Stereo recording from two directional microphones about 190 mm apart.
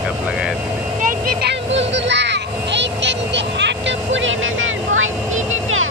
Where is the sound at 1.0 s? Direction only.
55° right (ahead or behind); by 5.9 s 90° right.